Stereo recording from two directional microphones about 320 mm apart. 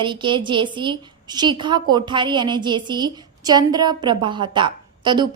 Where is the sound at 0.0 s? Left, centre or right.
Centre.